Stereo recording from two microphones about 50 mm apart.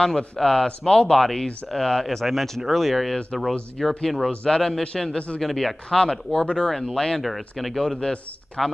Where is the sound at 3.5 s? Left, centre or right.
Left.